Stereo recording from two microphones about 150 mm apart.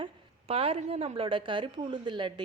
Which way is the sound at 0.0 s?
40° right (ahead or behind).